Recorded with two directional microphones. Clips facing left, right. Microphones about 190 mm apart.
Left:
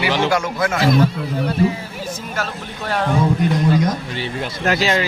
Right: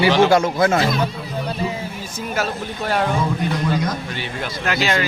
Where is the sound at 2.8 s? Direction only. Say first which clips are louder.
Right 1 dB; 5° right (ahead or behind).